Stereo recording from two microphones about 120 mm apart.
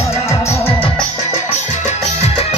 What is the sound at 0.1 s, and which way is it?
Music, 25° left (ahead or behind).